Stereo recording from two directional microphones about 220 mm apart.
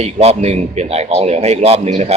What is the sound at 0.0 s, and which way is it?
A man's voice, 30° right (ahead or behind).